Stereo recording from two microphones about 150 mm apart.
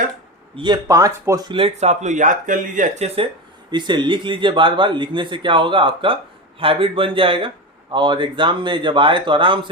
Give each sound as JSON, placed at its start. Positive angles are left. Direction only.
{"t": 0.5, "sound": "speech", "side_deg": -30}
{"t": 3.7, "sound": "speech", "side_deg": -30}